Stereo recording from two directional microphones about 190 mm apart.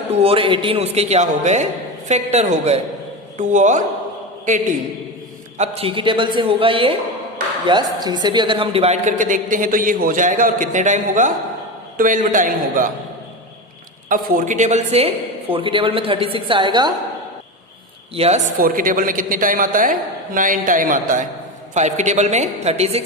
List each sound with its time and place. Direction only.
0.1 s a woman's voice: 30° right (ahead or behind)
5.5 s a woman's voice: 30° right (ahead or behind)
14.1 s a woman's voice: 45° right (ahead or behind); by 16.9 s 25° right (ahead or behind)
18.1 s a man's voice: 35° right (ahead or behind)